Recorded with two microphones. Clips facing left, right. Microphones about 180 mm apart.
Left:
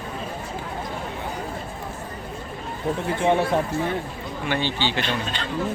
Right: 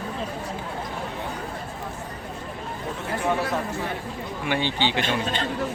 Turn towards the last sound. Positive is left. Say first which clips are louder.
# right 2 dB
turn(degrees=-50)  # may be behind; listen again after turning